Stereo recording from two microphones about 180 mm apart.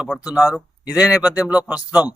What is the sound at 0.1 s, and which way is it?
Speech, 5° left (ahead or behind).